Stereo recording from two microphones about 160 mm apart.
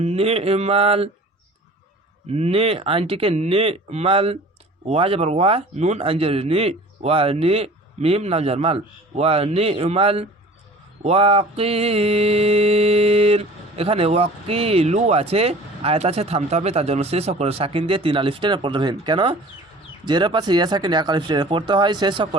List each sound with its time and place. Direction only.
0.0 s mantra: 40° right (ahead or behind)
2.3 s mantra: 40° right (ahead or behind)
20.1 s speech: 30° right (ahead or behind)